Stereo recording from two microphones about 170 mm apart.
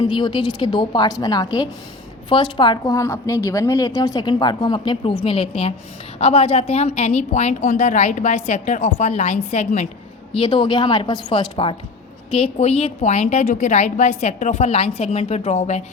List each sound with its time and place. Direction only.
0.2 s a woman's voice: 30° left (ahead or behind); by 9.9 s 45° left (ahead or behind)
10.3 s a woman's voice: 30° left (ahead or behind)